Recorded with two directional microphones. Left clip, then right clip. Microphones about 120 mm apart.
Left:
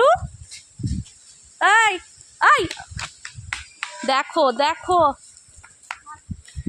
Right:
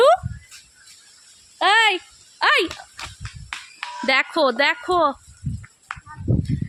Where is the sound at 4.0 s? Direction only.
15° right (ahead or behind).